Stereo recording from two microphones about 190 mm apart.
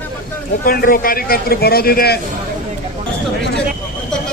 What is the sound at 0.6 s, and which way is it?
A man's voice, 50° left (ahead or behind).